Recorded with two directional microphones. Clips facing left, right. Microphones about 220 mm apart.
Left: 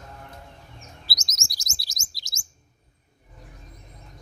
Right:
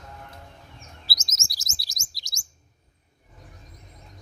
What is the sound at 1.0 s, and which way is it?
Chirp, centre (ahead or behind).